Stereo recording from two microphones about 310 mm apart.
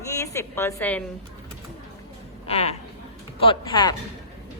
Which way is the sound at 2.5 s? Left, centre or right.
Centre.